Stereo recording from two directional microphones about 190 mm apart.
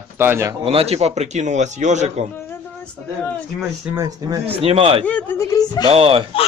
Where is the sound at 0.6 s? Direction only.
30° right (ahead or behind).